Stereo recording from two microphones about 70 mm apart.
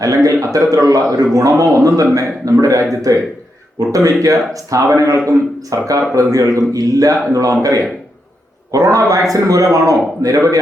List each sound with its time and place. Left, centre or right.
0.0 s a man's voice: right